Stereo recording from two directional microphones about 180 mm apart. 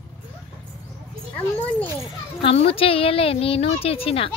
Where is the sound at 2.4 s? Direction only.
30° left (ahead or behind).